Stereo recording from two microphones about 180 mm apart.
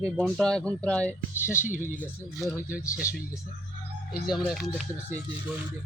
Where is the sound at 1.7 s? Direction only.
45° left (ahead or behind).